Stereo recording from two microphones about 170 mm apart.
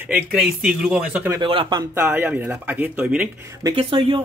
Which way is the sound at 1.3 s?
30° right (ahead or behind).